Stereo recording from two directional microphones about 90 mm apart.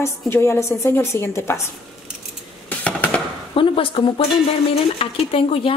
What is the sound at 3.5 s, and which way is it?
Speech, 75° left (ahead or behind).